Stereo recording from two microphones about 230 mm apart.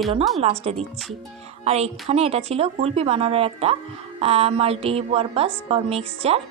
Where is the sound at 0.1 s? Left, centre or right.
Right.